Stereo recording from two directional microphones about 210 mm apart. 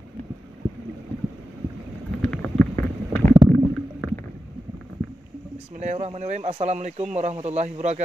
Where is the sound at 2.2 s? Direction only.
5° left (ahead or behind).